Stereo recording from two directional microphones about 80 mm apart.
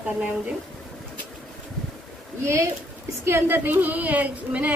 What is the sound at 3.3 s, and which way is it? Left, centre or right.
A woman's voice, right.